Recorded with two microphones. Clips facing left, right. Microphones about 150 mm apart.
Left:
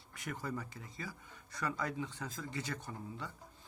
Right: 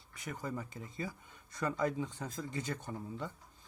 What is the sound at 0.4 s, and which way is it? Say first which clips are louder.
Speech: right 4 dB; 20° right (ahead or behind).